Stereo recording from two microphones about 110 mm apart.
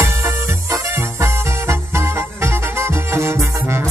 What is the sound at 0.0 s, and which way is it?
Music, 30° right (ahead or behind).